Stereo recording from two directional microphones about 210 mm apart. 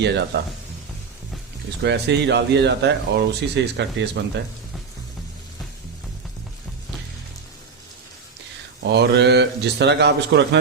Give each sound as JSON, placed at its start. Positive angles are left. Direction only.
{"t": 0.0, "sound": "speech", "side_deg": -55}
{"t": 1.8, "sound": "speech", "side_deg": -55}
{"t": 8.8, "sound": "speech", "side_deg": -55}